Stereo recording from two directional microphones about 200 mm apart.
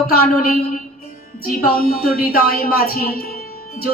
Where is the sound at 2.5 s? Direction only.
50° left (ahead or behind).